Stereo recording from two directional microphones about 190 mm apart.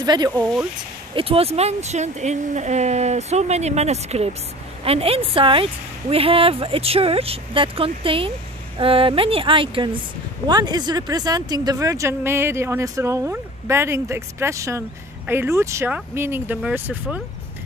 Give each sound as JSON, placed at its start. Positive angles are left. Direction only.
{"t": 0.0, "sound": "a woman's voice", "side_deg": -20}